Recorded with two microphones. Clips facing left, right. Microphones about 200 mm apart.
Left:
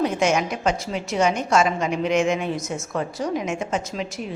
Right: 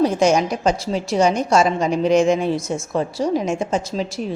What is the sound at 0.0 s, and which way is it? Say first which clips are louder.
A woman's voice: right 5 dB; 35° right (ahead or behind).